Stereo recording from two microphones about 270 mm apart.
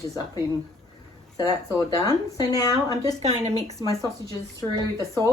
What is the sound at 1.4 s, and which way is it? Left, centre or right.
Speech, centre.